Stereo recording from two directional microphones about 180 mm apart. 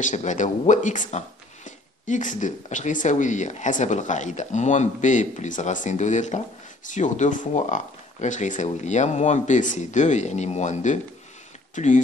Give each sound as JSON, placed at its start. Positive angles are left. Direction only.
{"t": 0.0, "sound": "speech", "side_deg": 40}